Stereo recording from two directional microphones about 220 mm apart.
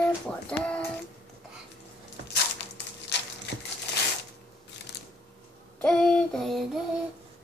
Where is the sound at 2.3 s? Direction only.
50° left (ahead or behind).